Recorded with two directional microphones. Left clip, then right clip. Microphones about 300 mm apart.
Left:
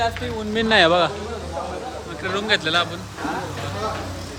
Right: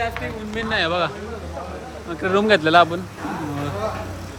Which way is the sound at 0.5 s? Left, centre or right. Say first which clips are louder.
Left 6 dB; left.